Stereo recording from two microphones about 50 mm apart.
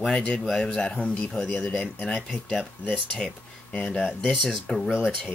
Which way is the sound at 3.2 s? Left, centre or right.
Centre.